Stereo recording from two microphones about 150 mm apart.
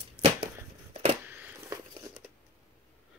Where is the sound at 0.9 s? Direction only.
50° right (ahead or behind).